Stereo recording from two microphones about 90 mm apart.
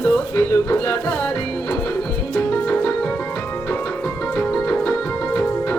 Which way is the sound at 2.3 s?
10° left (ahead or behind).